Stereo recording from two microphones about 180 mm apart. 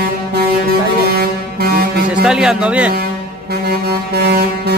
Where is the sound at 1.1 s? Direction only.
55° right (ahead or behind).